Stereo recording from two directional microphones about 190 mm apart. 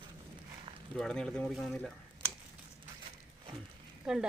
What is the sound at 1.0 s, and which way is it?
Speech, 5° left (ahead or behind).